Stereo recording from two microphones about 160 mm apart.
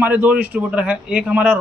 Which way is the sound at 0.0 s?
10° right (ahead or behind).